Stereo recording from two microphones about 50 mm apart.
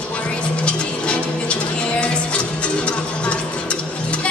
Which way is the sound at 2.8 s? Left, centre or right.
Left.